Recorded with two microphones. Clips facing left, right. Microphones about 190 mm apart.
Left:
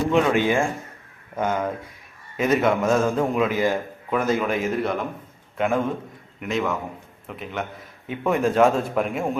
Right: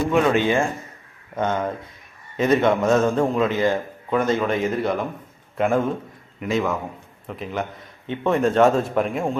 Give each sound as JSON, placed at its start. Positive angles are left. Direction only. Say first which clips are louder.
{"t": 0.1, "sound": "a man's voice", "louder": "right 1 dB", "side_deg": 15}